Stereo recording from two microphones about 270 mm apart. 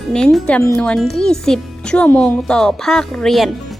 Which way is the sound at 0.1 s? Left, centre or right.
Centre.